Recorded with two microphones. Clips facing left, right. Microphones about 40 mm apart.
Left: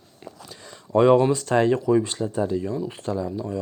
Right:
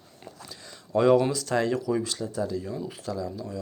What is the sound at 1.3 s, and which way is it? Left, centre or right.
Speech, left.